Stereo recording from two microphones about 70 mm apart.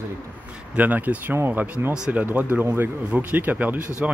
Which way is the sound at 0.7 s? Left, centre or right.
Right.